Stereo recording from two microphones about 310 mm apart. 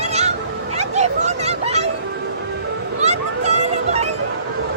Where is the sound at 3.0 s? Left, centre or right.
Right.